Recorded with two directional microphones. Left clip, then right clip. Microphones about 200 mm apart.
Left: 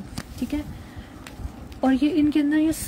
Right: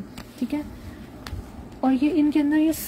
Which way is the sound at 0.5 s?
10° left (ahead or behind).